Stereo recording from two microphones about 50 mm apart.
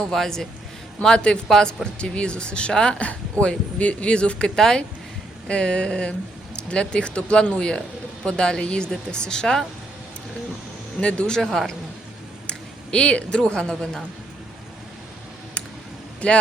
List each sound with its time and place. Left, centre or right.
0.0 s speech: centre
1.0 s speech: centre
11.3 s speech: centre
16.2 s speech: left